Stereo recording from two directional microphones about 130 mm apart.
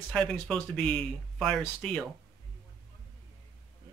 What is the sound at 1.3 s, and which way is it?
Speech, 5° left (ahead or behind).